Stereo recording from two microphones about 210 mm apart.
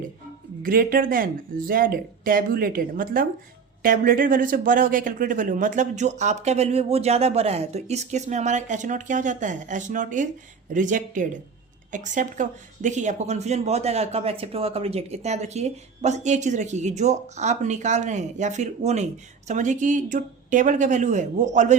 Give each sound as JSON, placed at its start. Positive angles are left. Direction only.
{"t": 0.6, "sound": "speech", "side_deg": -45}